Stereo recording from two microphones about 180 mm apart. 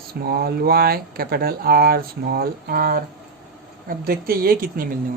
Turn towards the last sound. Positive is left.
turn(degrees=-50)  # may be behind; listen again after turning